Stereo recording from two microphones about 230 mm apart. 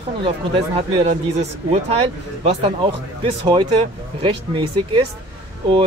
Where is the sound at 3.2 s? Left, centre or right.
Right.